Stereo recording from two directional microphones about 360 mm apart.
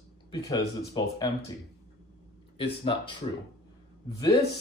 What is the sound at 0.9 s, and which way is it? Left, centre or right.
Speech, centre.